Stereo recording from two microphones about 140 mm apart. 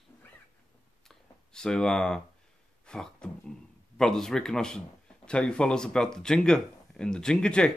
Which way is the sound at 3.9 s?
5° left (ahead or behind).